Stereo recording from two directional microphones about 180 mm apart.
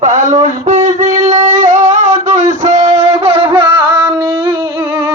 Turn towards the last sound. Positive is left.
turn(degrees=-15)  # may be behind; listen again after turning